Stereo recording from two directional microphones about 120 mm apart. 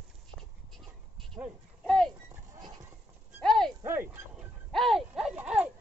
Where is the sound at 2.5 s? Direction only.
30° right (ahead or behind).